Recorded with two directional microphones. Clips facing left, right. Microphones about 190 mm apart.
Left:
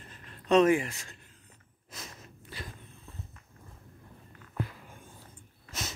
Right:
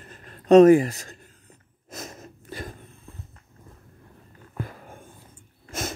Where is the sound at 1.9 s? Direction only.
45° right (ahead or behind).